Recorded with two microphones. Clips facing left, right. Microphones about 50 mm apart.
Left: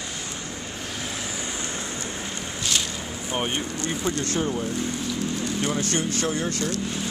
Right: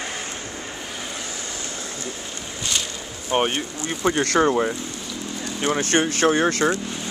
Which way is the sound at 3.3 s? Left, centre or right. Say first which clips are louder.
Right 7 dB; right.